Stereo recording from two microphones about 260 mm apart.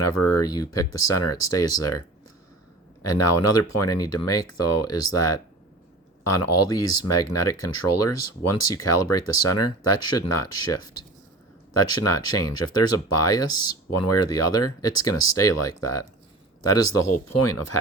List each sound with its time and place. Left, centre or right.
0.0 s speech: left
0.4 s speech: centre
0.7 s speech: left
3.0 s speech: left
12.5 s speech: left